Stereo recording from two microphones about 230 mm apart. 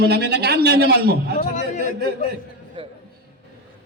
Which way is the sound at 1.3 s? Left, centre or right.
Left.